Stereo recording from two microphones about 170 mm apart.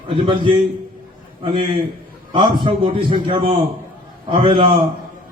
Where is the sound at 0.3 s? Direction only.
30° right (ahead or behind).